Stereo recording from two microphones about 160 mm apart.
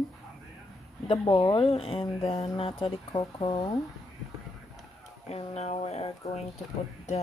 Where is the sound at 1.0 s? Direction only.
30° left (ahead or behind).